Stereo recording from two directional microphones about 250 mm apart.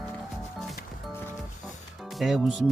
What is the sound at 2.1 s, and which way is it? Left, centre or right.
Speech, centre.